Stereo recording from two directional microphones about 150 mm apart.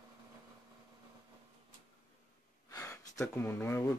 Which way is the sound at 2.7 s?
20° left (ahead or behind).